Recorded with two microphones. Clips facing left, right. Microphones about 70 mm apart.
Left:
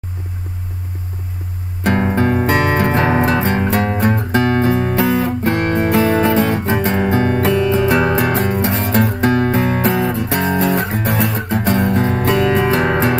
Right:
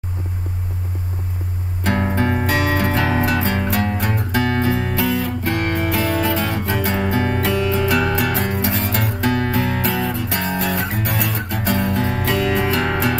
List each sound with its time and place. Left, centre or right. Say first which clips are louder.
2.0 s music: left 4 dB; left